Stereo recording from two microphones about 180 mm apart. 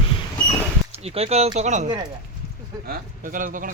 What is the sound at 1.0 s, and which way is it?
Speech, 35° right (ahead or behind).